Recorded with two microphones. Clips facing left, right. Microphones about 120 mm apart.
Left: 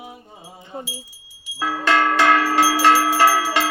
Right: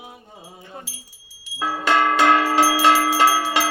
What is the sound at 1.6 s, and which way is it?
Bell, 15° right (ahead or behind).